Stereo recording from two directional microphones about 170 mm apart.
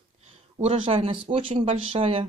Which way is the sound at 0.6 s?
35° right (ahead or behind).